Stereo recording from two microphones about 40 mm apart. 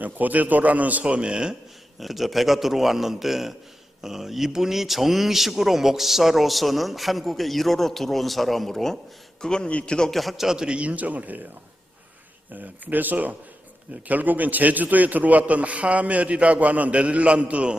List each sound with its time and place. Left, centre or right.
0.0 s a man's voice: right
1.0 s speech: right
2.0 s speech: centre
9.4 s a man's voice: centre
9.6 s a man's voice: left
10.1 s speech: centre
10.4 s a man's voice: centre
10.8 s a man's voice: right
12.5 s a man's voice: right